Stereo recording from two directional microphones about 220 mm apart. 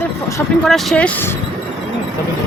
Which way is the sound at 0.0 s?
10° left (ahead or behind).